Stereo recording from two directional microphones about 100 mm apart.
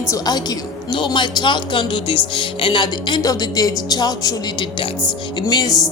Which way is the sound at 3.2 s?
40° left (ahead or behind).